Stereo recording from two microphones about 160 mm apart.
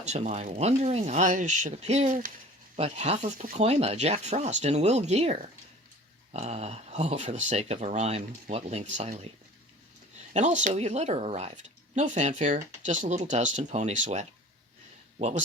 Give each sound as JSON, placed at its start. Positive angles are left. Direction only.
{"t": 0.0, "sound": "speech", "side_deg": -45}
{"t": 2.7, "sound": "speech", "side_deg": -40}
{"t": 3.6, "sound": "speech", "side_deg": -40}
{"t": 10.3, "sound": "speech", "side_deg": -50}